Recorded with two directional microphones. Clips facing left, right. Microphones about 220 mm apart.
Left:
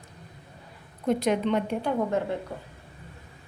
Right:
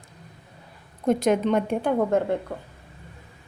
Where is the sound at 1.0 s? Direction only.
45° right (ahead or behind).